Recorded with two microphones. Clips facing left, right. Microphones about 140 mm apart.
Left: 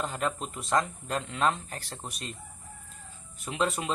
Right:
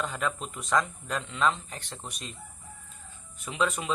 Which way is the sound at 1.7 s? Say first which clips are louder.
Left 1 dB; centre (ahead or behind).